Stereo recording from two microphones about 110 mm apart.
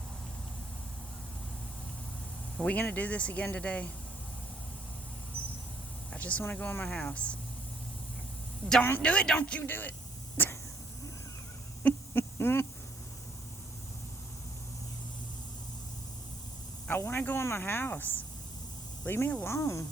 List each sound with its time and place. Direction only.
2.6 s speech: 10° left (ahead or behind)
6.1 s speech: 15° left (ahead or behind)
8.8 s speech: 15° left (ahead or behind)
10.3 s vehicle: 20° left (ahead or behind)
11.8 s a sound: 20° left (ahead or behind)
16.9 s speech: 20° left (ahead or behind)